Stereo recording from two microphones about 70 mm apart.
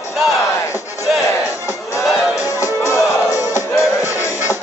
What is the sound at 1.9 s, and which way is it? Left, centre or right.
Music, left.